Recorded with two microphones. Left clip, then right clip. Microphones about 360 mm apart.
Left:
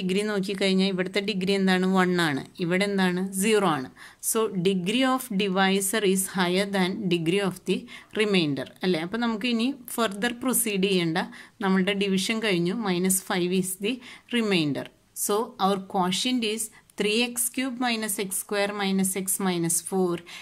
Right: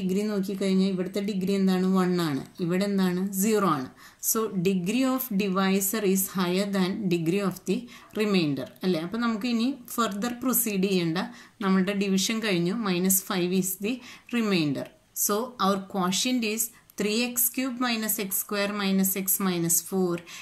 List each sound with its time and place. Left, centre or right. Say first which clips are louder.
0.0 s a woman's voice: left 2 dB; left